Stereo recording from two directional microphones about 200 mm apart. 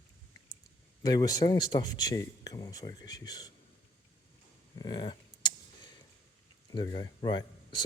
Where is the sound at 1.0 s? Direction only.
20° left (ahead or behind).